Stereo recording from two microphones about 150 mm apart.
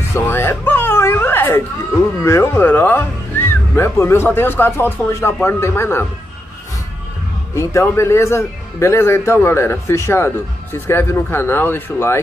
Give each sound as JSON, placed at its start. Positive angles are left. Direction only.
{"t": 0.1, "sound": "a man's voice", "side_deg": 15}
{"t": 7.5, "sound": "a man's voice", "side_deg": 20}